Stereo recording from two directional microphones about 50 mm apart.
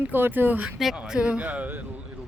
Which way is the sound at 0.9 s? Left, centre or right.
Centre.